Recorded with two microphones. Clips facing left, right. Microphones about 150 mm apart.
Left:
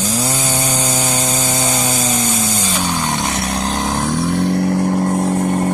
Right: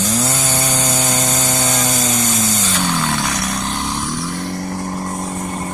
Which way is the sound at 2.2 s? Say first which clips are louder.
Even; 10° left (ahead or behind).